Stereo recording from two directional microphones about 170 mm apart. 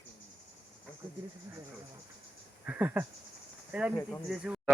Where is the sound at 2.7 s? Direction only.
10° right (ahead or behind).